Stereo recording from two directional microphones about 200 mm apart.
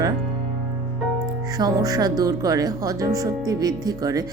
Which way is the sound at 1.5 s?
20° right (ahead or behind).